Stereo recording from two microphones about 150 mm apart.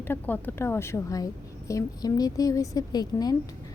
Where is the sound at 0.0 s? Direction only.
15° left (ahead or behind).